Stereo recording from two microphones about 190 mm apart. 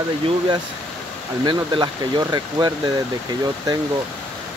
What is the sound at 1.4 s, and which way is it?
Speech, 25° right (ahead or behind).